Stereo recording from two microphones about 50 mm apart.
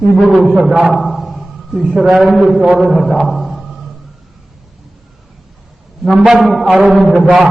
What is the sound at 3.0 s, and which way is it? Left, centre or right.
Music, centre.